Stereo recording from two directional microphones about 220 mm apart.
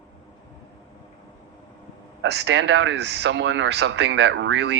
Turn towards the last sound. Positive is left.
turn(degrees=-50)  # may be behind; listen again after turning